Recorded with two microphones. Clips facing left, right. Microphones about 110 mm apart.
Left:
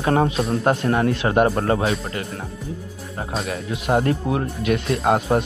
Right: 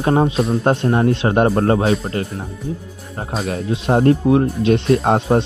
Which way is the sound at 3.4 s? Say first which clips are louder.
Right 6 dB; 30° right (ahead or behind).